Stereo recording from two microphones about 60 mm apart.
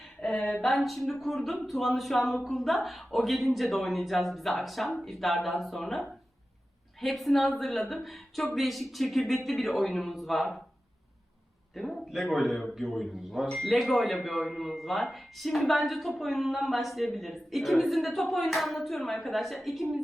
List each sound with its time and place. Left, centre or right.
0.2 s a sound: centre
0.6 s speech: centre
11.7 s speech: centre
13.5 s speech: centre